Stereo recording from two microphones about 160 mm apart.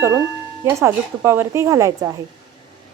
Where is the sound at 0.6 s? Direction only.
20° right (ahead or behind).